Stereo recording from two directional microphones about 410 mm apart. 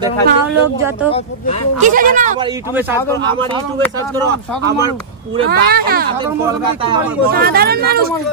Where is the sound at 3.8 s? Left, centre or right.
Centre.